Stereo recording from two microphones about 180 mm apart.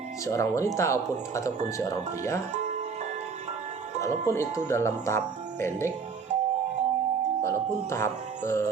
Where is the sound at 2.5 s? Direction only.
40° right (ahead or behind).